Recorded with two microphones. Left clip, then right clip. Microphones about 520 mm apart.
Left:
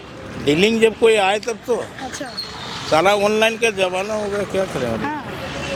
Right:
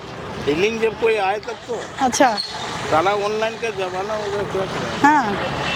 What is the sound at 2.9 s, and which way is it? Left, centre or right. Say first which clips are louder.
Speech: left 4 dB; left.